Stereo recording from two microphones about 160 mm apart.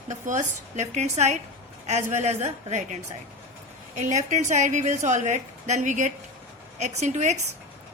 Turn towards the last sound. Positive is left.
turn(degrees=-45)  # may be behind; listen again after turning